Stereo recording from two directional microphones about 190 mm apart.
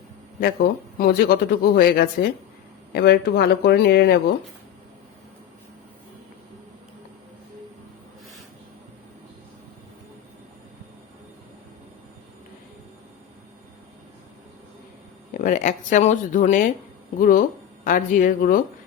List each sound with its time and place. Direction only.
0.9 s speech: 55° left (ahead or behind)
15.3 s speech: 45° left (ahead or behind)